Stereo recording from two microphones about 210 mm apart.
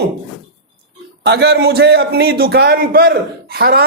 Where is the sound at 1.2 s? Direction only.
50° right (ahead or behind).